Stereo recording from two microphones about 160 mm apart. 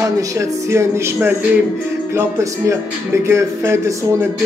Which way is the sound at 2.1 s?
20° right (ahead or behind).